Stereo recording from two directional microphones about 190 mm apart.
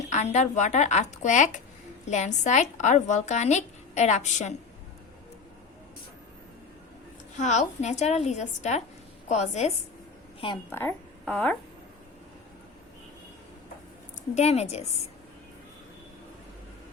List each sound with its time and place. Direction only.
0.0 s a woman's voice: 35° left (ahead or behind)
7.3 s a woman's voice: 40° left (ahead or behind)
10.7 s speech: 10° left (ahead or behind)
14.3 s a woman's voice: 35° left (ahead or behind)